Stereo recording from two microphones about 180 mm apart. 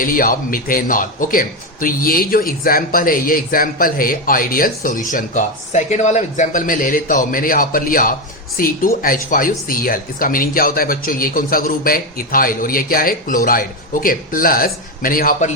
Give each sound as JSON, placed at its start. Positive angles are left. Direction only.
{"t": 0.0, "sound": "a man's voice", "side_deg": 50}